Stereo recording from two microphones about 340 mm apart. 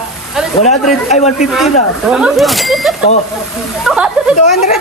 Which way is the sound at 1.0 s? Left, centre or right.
Left.